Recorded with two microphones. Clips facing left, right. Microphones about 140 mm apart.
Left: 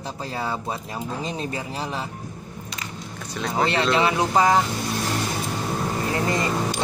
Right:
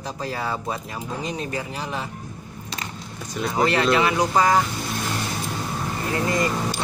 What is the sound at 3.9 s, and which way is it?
Speech, 25° left (ahead or behind).